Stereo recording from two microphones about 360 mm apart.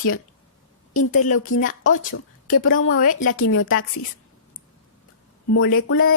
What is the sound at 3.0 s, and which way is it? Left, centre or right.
Speech, left.